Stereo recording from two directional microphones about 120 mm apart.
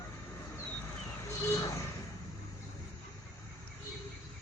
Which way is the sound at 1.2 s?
25° left (ahead or behind).